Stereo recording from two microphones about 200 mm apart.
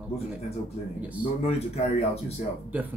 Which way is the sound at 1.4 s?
30° left (ahead or behind).